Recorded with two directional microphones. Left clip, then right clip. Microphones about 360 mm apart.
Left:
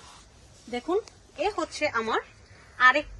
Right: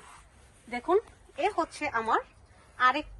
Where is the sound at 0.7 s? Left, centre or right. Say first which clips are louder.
Right 1 dB; right.